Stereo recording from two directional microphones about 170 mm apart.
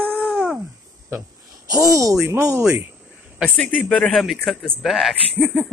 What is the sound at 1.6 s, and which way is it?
Speech, 20° right (ahead or behind).